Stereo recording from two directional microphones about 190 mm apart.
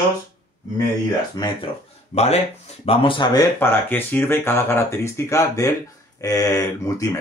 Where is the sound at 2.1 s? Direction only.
35° left (ahead or behind).